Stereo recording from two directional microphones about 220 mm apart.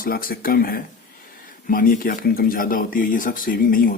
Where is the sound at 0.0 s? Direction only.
40° left (ahead or behind).